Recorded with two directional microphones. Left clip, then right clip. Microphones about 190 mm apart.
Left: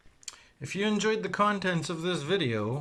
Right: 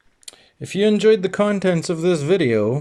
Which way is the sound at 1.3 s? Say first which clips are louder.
Right 8 dB; 30° right (ahead or behind).